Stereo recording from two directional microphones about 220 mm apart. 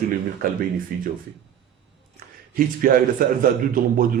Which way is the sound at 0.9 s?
40° right (ahead or behind).